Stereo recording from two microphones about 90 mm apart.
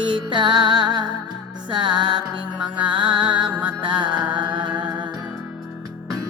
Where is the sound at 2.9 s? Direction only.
60° right (ahead or behind).